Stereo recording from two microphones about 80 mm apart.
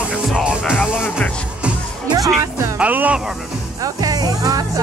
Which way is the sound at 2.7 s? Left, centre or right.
Centre.